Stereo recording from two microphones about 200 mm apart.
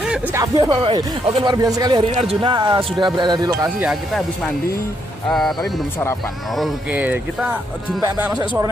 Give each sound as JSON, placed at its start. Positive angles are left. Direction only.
{"t": 0.1, "sound": "speech", "side_deg": -15}
{"t": 3.8, "sound": "speech", "side_deg": -5}
{"t": 5.6, "sound": "speech", "side_deg": 15}
{"t": 6.5, "sound": "speech", "side_deg": -5}
{"t": 8.0, "sound": "speech", "side_deg": -20}